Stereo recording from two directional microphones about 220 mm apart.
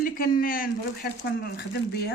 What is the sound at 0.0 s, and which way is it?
Speech, 40° left (ahead or behind).